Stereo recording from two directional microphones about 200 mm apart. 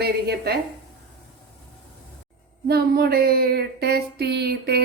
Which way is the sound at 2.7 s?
50° right (ahead or behind).